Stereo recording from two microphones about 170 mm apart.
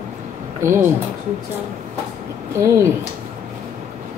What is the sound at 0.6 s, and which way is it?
Speech, 15° right (ahead or behind).